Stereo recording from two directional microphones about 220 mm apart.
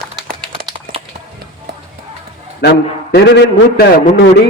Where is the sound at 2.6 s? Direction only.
50° left (ahead or behind).